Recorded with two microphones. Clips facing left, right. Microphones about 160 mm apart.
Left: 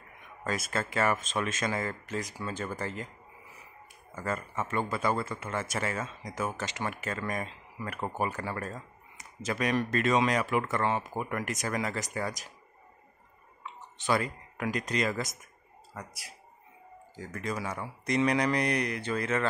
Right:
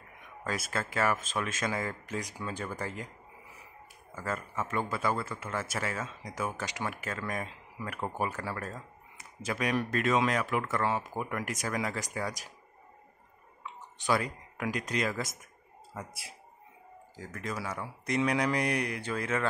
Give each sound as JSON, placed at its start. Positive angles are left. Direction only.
{"t": 0.5, "sound": "speech", "side_deg": -5}
{"t": 4.1, "sound": "speech", "side_deg": 0}
{"t": 13.9, "sound": "speech", "side_deg": -10}
{"t": 16.1, "sound": "speech", "side_deg": -25}
{"t": 17.1, "sound": "speech", "side_deg": -5}